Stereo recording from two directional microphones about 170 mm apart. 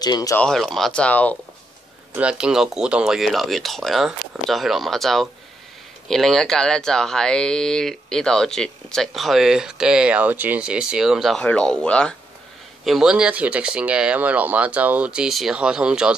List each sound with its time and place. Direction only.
0.0 s speech: 20° left (ahead or behind)
0.4 s speech: centre (ahead or behind)
2.1 s speech: 5° right (ahead or behind)